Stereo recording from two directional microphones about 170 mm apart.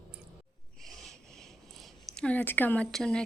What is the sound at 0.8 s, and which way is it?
Writing, centre (ahead or behind).